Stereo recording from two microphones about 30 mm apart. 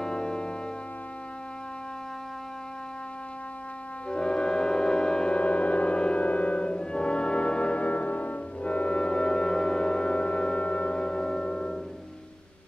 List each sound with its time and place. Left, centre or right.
0.0 s music: left
4.1 s music: left
5.4 s music: left
6.7 s music: left
8.6 s music: left
11.0 s music: centre